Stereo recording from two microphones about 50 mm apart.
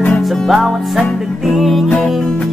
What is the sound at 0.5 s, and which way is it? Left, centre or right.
Music, centre.